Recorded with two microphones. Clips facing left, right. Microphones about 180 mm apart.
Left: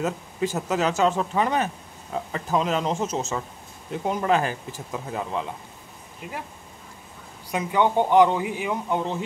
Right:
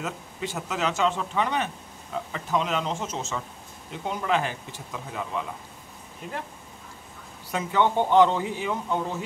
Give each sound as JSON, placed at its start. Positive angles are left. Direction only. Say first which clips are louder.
{"t": 0.0, "sound": "speech", "louder": "left 7 dB", "side_deg": 40}
{"t": 7.5, "sound": "speech", "louder": "left 2 dB", "side_deg": 15}